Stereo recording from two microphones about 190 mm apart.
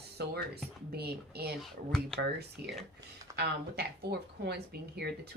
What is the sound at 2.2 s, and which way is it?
Speech, 60° right (ahead or behind).